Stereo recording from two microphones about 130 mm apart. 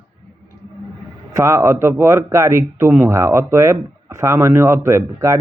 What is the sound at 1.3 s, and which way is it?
Speech, 20° right (ahead or behind).